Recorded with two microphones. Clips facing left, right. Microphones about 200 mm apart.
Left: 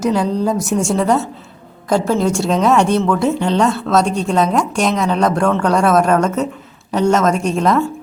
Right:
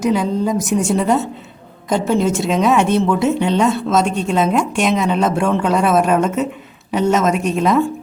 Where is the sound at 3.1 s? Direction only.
5° right (ahead or behind).